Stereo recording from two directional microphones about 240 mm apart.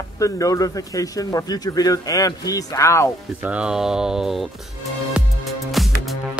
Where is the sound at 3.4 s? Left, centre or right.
Centre.